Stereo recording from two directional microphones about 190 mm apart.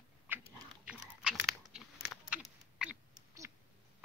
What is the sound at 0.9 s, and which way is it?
Chewing, centre (ahead or behind).